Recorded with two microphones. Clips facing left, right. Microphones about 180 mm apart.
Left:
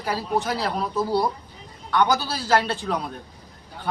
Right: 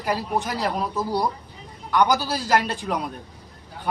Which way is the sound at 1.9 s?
15° right (ahead or behind).